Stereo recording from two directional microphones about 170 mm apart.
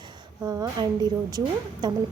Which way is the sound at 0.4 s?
20° right (ahead or behind).